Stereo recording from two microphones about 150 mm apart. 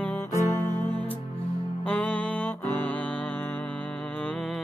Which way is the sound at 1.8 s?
10° left (ahead or behind).